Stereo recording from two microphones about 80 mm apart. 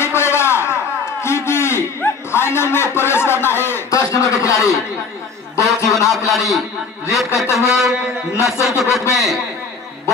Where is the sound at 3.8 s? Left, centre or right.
Left.